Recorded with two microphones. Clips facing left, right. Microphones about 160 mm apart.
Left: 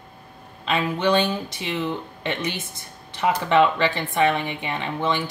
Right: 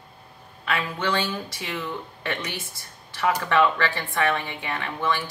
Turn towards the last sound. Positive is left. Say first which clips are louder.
# left 2 dB
turn(degrees=20)  # may be behind; listen again after turning